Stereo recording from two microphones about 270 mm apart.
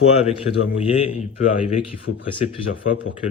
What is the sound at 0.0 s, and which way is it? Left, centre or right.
Speech, left.